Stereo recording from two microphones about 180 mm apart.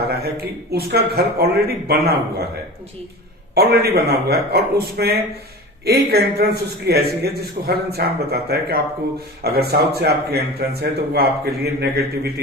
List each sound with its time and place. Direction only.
0.2 s speech: 60° right (ahead or behind)
3.5 s speech: 60° right (ahead or behind)